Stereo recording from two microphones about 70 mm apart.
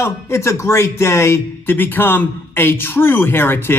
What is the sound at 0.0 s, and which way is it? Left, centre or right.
Speech, left.